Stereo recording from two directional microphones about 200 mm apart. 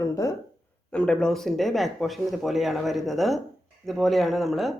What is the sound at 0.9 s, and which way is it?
Speech, 5° left (ahead or behind).